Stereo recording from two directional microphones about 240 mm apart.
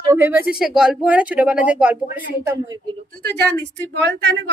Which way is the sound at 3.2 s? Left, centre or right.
Right.